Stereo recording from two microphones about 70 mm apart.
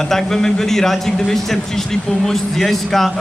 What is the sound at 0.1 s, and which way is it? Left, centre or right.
A man's voice, centre.